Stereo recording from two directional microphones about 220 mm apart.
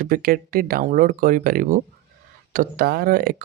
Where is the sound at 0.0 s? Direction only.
40° right (ahead or behind).